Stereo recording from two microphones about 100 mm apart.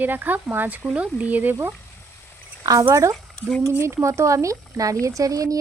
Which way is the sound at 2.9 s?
30° right (ahead or behind).